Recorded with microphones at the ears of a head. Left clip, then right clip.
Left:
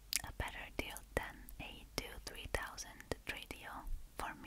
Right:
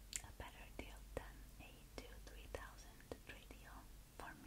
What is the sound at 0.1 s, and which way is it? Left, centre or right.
Whispering, left.